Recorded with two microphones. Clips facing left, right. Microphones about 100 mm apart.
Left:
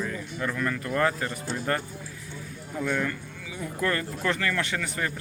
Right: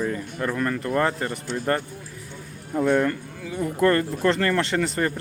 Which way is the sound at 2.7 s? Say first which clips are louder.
Right 8 dB; 45° right (ahead or behind).